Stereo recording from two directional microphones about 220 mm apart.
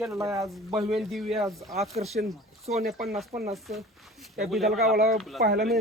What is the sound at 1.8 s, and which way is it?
Speech, 30° right (ahead or behind).